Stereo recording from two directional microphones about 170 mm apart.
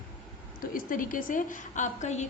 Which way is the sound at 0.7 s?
55° left (ahead or behind).